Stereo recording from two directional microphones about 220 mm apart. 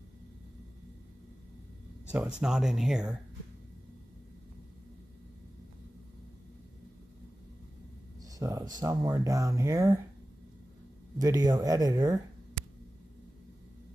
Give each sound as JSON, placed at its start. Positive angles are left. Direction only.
{"t": 2.0, "sound": "speech", "side_deg": -5}
{"t": 8.2, "sound": "a sound", "side_deg": -15}
{"t": 8.8, "sound": "speech", "side_deg": -15}
{"t": 11.1, "sound": "speech", "side_deg": -15}